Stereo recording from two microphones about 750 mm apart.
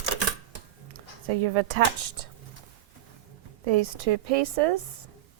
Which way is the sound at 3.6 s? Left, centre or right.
Right.